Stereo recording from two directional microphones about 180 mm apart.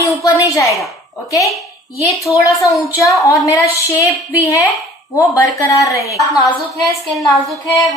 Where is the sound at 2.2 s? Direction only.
15° left (ahead or behind).